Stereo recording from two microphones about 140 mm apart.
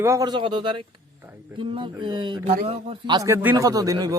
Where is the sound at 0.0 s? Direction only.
25° right (ahead or behind); by 3.2 s 45° right (ahead or behind).